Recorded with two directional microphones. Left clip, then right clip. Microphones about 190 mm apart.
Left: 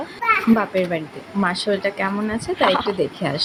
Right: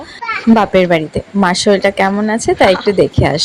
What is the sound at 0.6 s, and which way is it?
A woman's voice, 40° right (ahead or behind).